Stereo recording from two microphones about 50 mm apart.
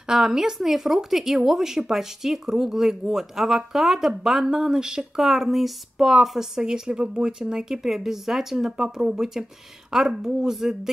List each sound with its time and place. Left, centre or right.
0.1 s speech: centre